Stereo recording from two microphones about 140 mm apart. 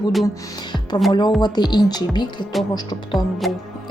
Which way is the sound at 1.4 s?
30° left (ahead or behind).